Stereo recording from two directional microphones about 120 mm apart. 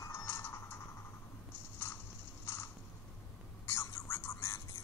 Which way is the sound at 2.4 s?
20° left (ahead or behind).